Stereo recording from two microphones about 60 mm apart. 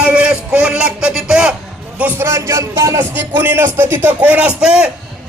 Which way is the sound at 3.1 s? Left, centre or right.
Right.